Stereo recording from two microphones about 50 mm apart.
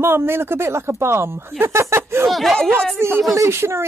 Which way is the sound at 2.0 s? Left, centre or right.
Right.